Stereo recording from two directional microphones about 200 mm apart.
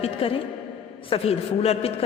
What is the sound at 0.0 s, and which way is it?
A woman's voice, 30° left (ahead or behind).